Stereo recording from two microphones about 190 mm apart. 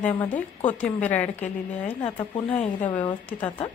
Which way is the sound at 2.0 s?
30° left (ahead or behind).